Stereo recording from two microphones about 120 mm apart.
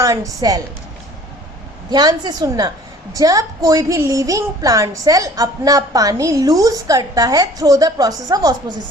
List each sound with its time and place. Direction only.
0.0 s a woman's voice: 30° right (ahead or behind)
1.9 s a woman's voice: 35° right (ahead or behind)